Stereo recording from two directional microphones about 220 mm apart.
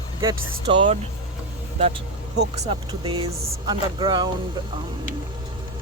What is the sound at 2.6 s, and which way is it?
Speech, 25° right (ahead or behind).